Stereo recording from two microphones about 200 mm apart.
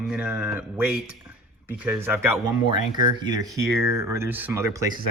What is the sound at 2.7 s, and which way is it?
Speech, 20° right (ahead or behind).